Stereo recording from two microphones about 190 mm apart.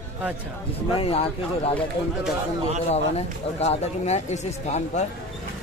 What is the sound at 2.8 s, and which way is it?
Speech, 35° left (ahead or behind).